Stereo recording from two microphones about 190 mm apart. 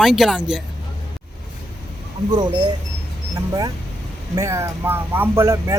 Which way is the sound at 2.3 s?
20° right (ahead or behind).